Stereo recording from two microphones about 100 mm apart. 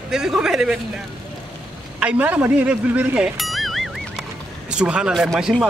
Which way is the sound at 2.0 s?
15° right (ahead or behind).